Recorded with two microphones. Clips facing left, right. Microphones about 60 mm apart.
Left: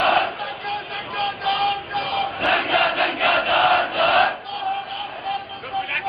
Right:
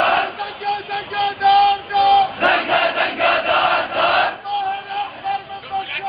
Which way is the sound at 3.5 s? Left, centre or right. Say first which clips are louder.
Even; centre.